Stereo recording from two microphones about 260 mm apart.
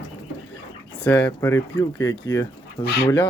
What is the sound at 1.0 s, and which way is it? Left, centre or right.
Speech, centre.